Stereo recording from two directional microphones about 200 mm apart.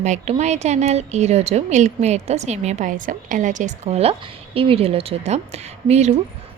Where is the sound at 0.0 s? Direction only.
35° right (ahead or behind).